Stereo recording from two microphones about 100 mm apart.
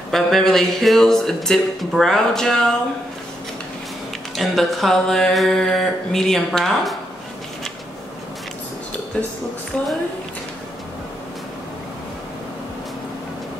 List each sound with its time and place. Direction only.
0.1 s speech: 5° left (ahead or behind)
4.4 s speech: centre (ahead or behind)